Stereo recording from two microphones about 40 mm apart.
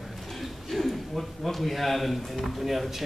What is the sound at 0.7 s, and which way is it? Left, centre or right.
A man's voice, centre.